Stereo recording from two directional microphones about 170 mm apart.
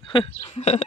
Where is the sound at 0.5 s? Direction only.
40° left (ahead or behind).